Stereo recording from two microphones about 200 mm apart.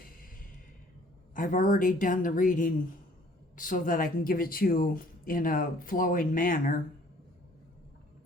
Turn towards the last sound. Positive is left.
turn(degrees=45)  # may be behind; listen again after turning